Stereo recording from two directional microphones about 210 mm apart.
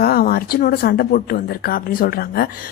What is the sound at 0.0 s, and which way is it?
A woman's voice, 45° left (ahead or behind).